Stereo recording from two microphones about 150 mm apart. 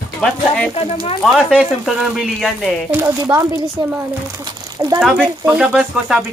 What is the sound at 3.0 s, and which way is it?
Speech, 20° right (ahead or behind).